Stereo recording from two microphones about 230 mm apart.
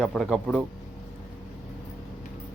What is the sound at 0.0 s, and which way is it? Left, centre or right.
Speech, centre.